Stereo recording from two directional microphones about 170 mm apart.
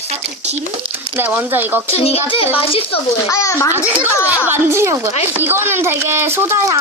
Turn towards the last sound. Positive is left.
turn(degrees=-15)  # may be behind; listen again after turning